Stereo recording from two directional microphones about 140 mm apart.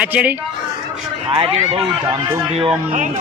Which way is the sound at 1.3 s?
40° right (ahead or behind).